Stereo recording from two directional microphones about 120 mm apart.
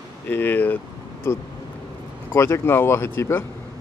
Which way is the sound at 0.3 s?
15° left (ahead or behind).